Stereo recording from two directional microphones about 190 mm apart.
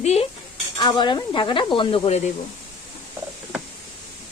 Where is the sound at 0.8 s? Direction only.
25° left (ahead or behind).